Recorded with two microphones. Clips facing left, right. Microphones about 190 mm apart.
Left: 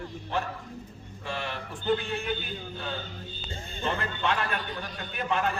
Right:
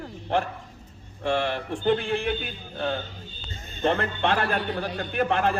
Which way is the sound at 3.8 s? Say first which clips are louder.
Right 6 dB; 60° right (ahead or behind).